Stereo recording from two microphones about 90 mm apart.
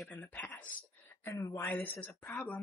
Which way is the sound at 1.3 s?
40° left (ahead or behind).